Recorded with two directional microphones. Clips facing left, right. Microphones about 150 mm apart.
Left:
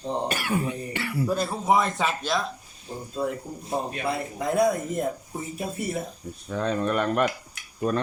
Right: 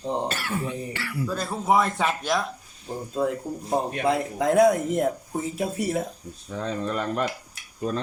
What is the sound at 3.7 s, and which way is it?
Speech, 45° right (ahead or behind).